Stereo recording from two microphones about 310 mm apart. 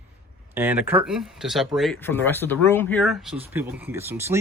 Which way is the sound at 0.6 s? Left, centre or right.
Centre.